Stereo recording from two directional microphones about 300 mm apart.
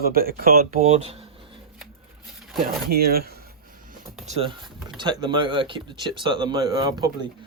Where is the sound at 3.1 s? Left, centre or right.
Right.